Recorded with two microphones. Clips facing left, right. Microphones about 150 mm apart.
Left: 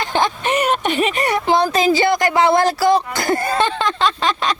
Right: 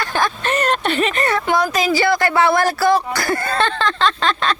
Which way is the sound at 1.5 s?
30° left (ahead or behind).